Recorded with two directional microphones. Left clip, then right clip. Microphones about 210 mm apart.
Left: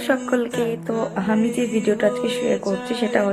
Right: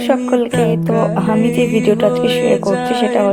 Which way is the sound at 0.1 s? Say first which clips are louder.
Right 6 dB; 15° right (ahead or behind).